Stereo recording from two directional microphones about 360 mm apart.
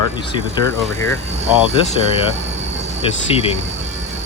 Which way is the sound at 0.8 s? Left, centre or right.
Centre.